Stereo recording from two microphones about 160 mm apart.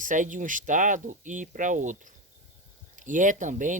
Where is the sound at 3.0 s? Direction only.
55° right (ahead or behind).